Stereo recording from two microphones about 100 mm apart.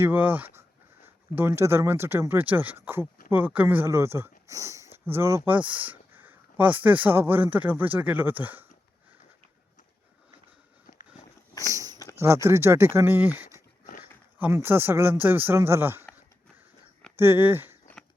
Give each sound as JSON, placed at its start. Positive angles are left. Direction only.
{"t": 0.0, "sound": "speech", "side_deg": -20}
{"t": 5.5, "sound": "speech", "side_deg": -15}
{"t": 11.6, "sound": "a sound", "side_deg": -35}
{"t": 12.1, "sound": "speech", "side_deg": -30}
{"t": 17.2, "sound": "speech", "side_deg": -20}